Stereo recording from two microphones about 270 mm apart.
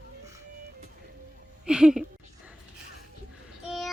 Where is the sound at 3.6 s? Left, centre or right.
Centre.